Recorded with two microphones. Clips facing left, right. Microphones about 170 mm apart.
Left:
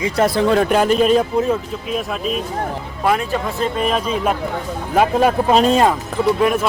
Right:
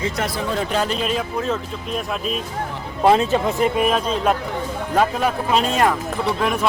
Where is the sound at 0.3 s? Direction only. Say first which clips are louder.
Left 8 dB; 70° left (ahead or behind); by 1.2 s 50° left (ahead or behind).